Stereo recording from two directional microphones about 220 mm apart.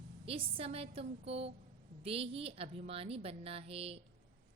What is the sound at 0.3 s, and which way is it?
A woman's voice, 25° right (ahead or behind).